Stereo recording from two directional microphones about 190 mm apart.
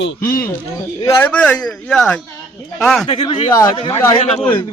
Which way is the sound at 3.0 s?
25° left (ahead or behind).